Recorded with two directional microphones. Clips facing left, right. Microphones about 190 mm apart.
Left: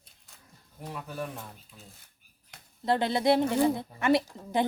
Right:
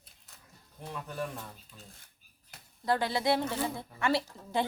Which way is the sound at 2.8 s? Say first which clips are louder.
Left 4 dB; 25° left (ahead or behind).